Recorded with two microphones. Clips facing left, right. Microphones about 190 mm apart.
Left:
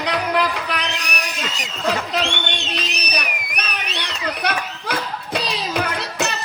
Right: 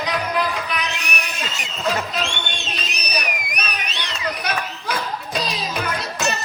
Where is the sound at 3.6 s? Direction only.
65° left (ahead or behind).